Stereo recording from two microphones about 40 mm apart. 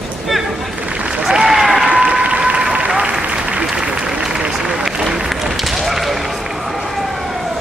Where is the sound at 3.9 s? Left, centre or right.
Centre.